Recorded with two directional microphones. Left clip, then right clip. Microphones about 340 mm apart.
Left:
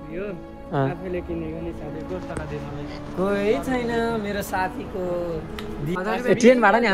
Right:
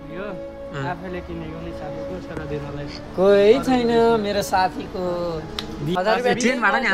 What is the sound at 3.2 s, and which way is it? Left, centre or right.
Speech, right.